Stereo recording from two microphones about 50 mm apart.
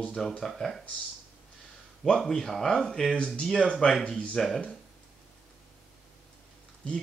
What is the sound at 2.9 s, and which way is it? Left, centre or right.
Speech, centre.